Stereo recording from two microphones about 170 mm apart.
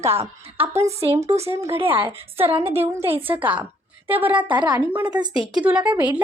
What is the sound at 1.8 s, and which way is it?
Speech, 30° right (ahead or behind).